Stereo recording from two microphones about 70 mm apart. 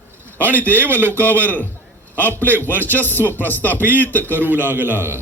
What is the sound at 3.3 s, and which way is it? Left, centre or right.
Speech, left.